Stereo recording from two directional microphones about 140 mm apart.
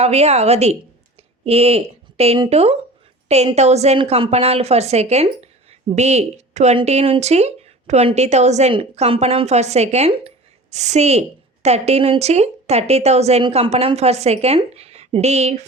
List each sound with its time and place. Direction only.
0.0 s speech: 50° right (ahead or behind)